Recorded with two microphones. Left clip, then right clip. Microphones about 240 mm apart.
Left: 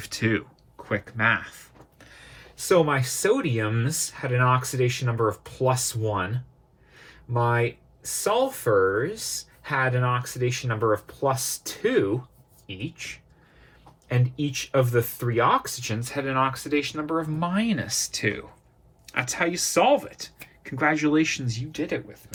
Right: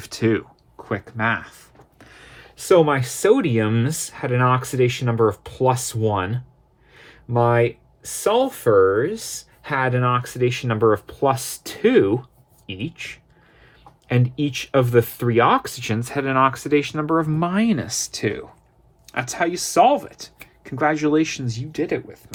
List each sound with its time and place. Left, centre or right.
0.0 s a sound: right
2.0 s a sound: right
2.9 s speech: right
4.4 s speech: right
5.1 s speech: right
6.0 s speech: right
7.3 s speech: right
8.5 s speech: right
14.1 s speech: right
15.9 s speech: right